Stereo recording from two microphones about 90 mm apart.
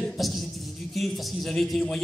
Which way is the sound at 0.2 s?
Centre (ahead or behind).